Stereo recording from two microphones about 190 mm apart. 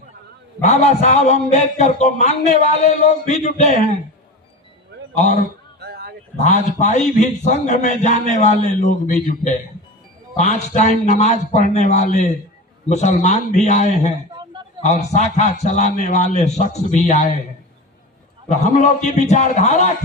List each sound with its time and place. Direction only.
0.6 s a man's voice: 35° left (ahead or behind)
5.8 s a sound: 55° right (ahead or behind)
6.3 s a man's voice: 40° left (ahead or behind)
18.4 s a man's voice: 40° left (ahead or behind)